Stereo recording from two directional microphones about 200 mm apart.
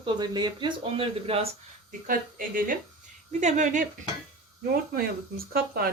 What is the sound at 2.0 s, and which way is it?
Speech, 45° right (ahead or behind).